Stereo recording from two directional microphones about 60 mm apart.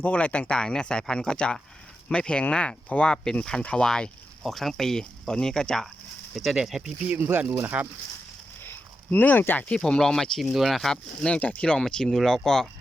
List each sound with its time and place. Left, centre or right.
0.0 s speech: left
4.4 s speech: centre
6.3 s speech: centre
7.5 s speech: right
9.0 s speech: left
9.6 s speech: centre
10.9 s speech: centre